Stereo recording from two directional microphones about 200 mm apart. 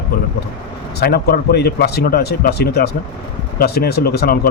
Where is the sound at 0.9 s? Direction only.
50° left (ahead or behind).